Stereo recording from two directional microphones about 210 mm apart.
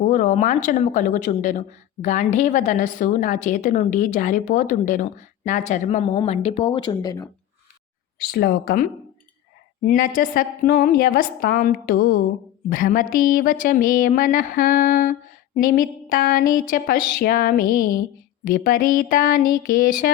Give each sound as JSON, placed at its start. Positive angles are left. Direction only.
{"t": 0.0, "sound": "a woman's voice", "side_deg": 35}
{"t": 8.2, "sound": "a woman's voice", "side_deg": 50}